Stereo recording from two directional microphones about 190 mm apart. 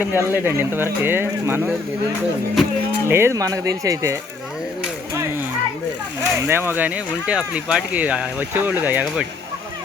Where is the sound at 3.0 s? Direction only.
15° right (ahead or behind).